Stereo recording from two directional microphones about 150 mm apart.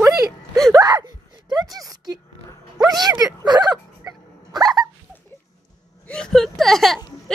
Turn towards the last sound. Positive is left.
turn(degrees=0)  # may be behind; listen again after turning